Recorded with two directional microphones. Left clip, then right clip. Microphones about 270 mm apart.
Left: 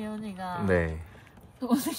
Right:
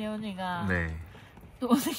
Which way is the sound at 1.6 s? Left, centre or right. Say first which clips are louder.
Right 1 dB; right.